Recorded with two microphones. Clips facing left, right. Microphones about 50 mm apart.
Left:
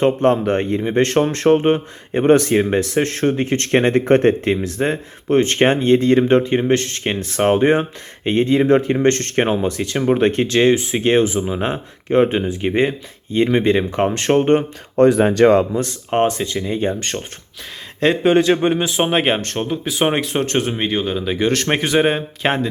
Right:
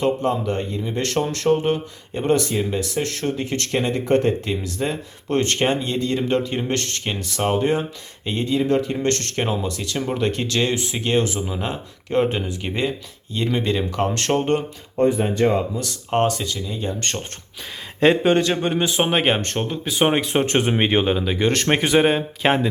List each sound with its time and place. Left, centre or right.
0.2 s speech: left
5.3 s speech: left
5.5 s speech: left; by 7.0 s centre
7.0 s speech: left
14.9 s speech: left
16.0 s speech: centre
16.6 s speech: left
17.0 s speech: centre
18.3 s a man's voice: centre
18.8 s speech: centre; by 21.2 s right
21.2 s speech: centre